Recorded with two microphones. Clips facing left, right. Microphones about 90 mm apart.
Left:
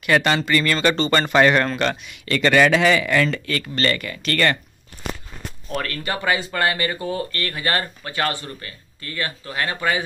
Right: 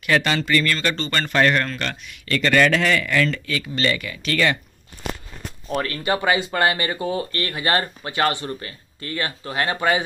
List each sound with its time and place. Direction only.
0.0 s speech: 5° left (ahead or behind)
5.7 s speech: 20° right (ahead or behind)